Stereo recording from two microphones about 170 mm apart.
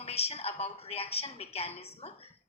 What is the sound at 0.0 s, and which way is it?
A woman's voice, 35° left (ahead or behind).